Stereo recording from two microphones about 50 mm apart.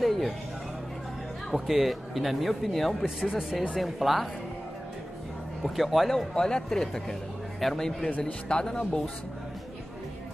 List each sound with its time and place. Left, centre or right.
0.0 s music: centre
1.5 s speech: centre
3.2 s speech: centre
3.7 s speech: centre
5.6 s a man's voice: centre